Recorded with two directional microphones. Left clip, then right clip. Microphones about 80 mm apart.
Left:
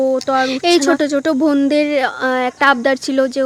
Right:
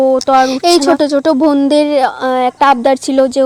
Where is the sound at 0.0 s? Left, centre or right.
Right.